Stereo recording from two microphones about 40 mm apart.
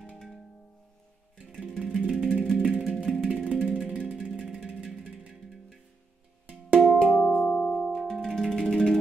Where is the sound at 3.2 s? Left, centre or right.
Right.